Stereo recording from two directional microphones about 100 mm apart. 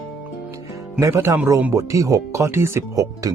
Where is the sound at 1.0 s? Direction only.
30° right (ahead or behind).